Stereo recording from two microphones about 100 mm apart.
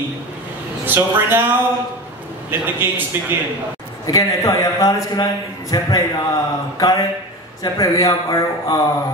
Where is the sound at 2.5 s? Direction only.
20° right (ahead or behind).